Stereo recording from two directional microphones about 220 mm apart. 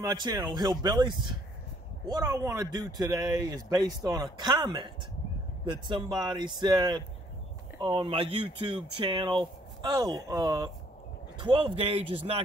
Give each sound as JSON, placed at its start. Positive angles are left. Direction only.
{"t": 0.0, "sound": "speech", "side_deg": -15}